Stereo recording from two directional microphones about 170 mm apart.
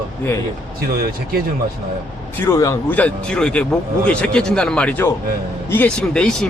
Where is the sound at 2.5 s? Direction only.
15° left (ahead or behind).